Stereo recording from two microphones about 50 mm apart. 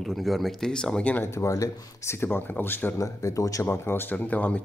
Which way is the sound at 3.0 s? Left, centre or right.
Left.